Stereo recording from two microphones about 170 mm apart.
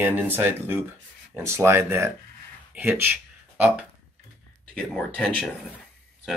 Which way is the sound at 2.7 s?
10° right (ahead or behind).